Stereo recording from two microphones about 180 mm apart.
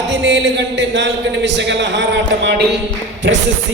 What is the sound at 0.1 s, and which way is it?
A man's voice, 75° right (ahead or behind).